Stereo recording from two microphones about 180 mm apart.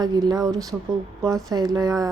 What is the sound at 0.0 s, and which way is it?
A woman's voice, 20° right (ahead or behind).